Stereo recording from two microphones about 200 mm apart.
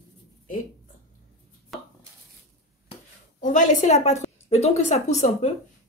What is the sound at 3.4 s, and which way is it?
A woman's voice, 40° left (ahead or behind).